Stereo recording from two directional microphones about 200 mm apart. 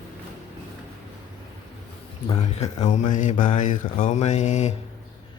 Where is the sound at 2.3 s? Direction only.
35° left (ahead or behind).